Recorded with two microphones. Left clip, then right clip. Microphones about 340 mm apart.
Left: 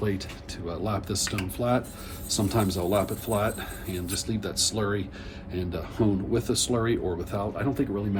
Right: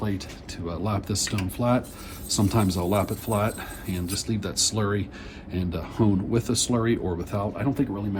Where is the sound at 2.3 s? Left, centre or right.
Centre.